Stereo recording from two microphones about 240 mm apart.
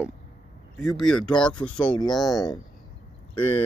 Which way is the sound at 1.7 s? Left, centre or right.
Centre.